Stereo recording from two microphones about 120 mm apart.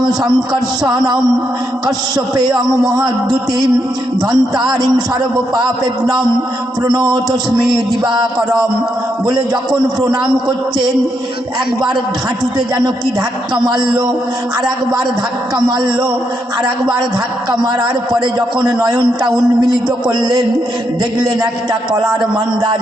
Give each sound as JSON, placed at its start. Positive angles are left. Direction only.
{"t": 0.9, "sound": "a man's voice", "side_deg": -35}
{"t": 4.3, "sound": "a man's voice", "side_deg": -35}
{"t": 12.5, "sound": "a man's voice", "side_deg": -35}
{"t": 15.5, "sound": "a man's voice", "side_deg": -35}
{"t": 17.5, "sound": "a man's voice", "side_deg": -35}